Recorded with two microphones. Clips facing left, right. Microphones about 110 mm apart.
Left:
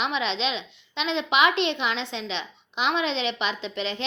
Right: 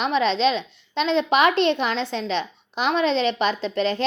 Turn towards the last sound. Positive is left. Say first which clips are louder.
# right 8 dB
turn(degrees=-40)  # may be behind; listen again after turning